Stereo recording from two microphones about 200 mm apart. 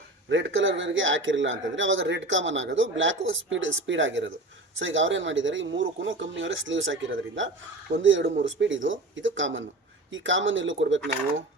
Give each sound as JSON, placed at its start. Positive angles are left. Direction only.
{"t": 0.3, "sound": "a man's voice", "side_deg": -65}